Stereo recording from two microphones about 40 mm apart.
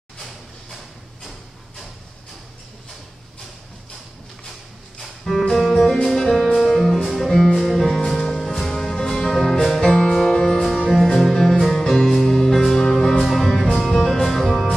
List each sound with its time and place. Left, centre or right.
5.3 s music: centre
9.8 s music: left
10.4 s music: centre
13.2 s music: centre